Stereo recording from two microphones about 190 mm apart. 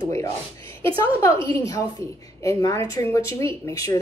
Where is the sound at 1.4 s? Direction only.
20° left (ahead or behind).